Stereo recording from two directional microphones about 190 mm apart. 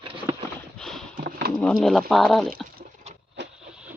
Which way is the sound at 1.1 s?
55° right (ahead or behind).